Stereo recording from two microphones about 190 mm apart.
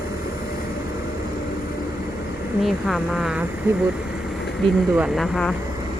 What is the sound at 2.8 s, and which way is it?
Speech, centre (ahead or behind).